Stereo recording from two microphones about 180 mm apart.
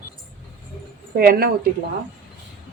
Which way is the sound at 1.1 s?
60° right (ahead or behind).